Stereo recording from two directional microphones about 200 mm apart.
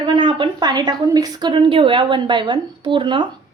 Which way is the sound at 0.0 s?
25° right (ahead or behind).